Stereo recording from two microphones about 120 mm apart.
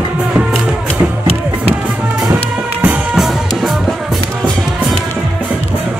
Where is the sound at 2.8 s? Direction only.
10° right (ahead or behind).